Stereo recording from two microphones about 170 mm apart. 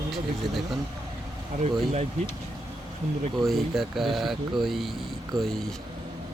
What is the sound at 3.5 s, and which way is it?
Speech, centre (ahead or behind).